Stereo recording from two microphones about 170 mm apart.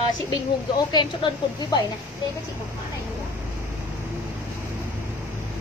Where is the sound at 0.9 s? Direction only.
25° left (ahead or behind).